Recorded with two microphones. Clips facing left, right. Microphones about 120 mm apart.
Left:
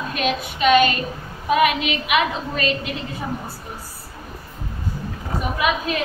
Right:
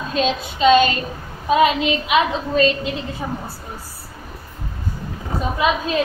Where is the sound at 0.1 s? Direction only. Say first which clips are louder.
Right 4 dB; 25° right (ahead or behind).